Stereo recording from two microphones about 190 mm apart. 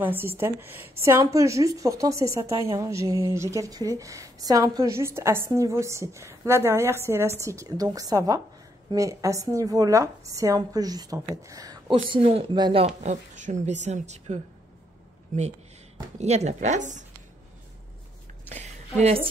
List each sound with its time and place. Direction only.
0.0 s a woman's voice: 10° right (ahead or behind); by 12.8 s 25° right (ahead or behind)
12.8 s speech: 40° right (ahead or behind)
18.5 s speech: 35° right (ahead or behind)